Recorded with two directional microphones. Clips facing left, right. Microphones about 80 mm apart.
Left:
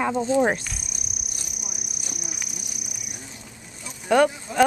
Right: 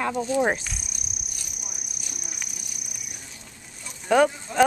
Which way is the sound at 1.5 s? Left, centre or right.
Centre.